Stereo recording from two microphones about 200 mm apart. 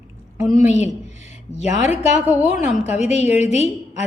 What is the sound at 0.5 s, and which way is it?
A woman's voice, 35° left (ahead or behind).